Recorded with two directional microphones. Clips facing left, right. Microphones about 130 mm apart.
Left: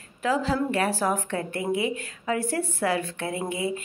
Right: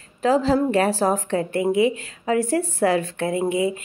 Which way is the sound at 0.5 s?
35° right (ahead or behind).